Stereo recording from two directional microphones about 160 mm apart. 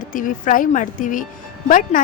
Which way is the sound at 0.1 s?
55° left (ahead or behind).